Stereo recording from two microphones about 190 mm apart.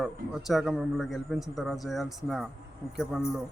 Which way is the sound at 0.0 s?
Centre (ahead or behind).